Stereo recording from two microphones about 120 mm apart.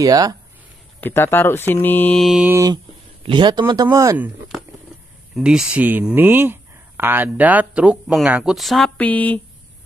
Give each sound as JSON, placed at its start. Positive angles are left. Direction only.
{"t": 0.0, "sound": "speech", "side_deg": -30}
{"t": 1.0, "sound": "speech", "side_deg": 20}
{"t": 2.1, "sound": "speech", "side_deg": 0}
{"t": 3.3, "sound": "speech", "side_deg": -40}
{"t": 3.9, "sound": "speech", "side_deg": -25}
{"t": 5.3, "sound": "speech", "side_deg": -5}
{"t": 8.9, "sound": "speech", "side_deg": 10}